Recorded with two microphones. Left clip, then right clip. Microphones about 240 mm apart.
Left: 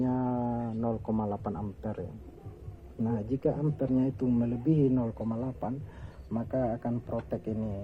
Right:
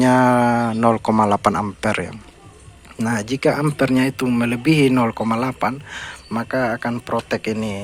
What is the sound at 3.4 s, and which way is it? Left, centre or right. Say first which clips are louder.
Speech: right 13 dB; right.